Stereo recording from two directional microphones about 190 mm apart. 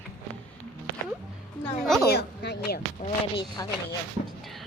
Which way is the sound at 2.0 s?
60° left (ahead or behind).